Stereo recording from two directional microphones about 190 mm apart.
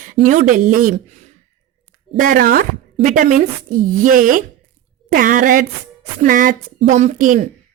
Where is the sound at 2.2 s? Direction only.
50° right (ahead or behind).